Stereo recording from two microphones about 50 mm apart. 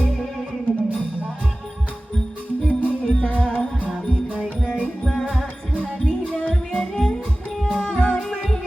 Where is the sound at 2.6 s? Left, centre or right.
Left.